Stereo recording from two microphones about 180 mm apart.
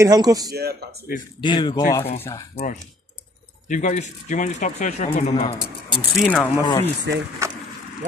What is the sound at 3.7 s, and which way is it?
Speech, 45° left (ahead or behind).